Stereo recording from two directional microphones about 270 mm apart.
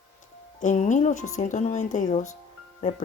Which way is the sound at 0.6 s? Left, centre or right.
Left.